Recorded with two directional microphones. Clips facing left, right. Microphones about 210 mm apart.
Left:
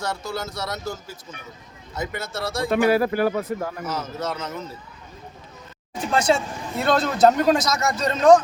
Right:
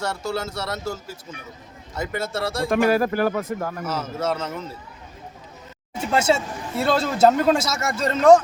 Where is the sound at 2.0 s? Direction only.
30° right (ahead or behind).